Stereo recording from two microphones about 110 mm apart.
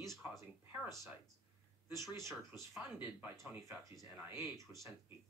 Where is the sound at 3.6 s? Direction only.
30° right (ahead or behind).